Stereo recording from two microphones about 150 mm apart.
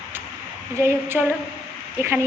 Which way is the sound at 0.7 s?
15° right (ahead or behind).